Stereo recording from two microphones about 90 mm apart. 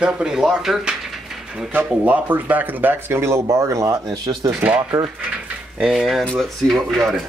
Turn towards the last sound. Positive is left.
turn(degrees=0)  # may be behind; listen again after turning